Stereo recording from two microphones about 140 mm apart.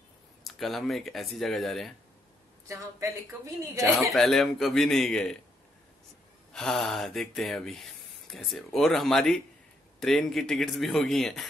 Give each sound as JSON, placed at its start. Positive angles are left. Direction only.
{"t": 0.5, "sound": "a man's voice", "side_deg": 0}
{"t": 2.7, "sound": "a woman's voice", "side_deg": -20}
{"t": 4.1, "sound": "a man's voice", "side_deg": 0}
{"t": 6.5, "sound": "a man's voice", "side_deg": 5}